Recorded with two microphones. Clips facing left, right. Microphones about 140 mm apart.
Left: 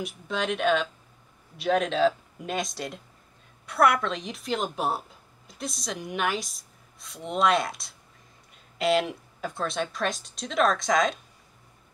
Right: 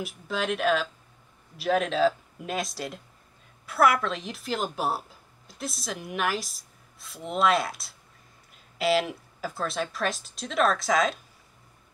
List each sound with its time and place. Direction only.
0.0 s a woman's voice: centre (ahead or behind)